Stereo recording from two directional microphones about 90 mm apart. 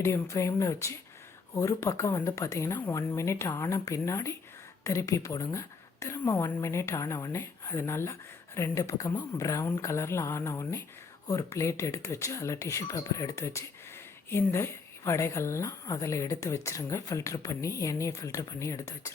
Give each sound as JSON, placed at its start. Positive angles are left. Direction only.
{"t": 0.0, "sound": "a woman's voice", "side_deg": 35}